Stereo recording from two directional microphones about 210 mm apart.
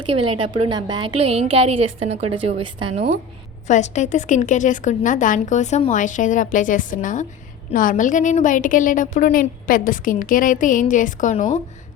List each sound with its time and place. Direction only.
0.0 s a woman's voice: 25° right (ahead or behind)
3.7 s a woman's voice: 35° left (ahead or behind)